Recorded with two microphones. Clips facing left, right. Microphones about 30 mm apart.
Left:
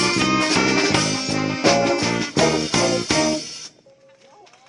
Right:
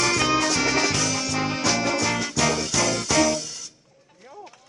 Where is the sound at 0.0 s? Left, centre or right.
Left.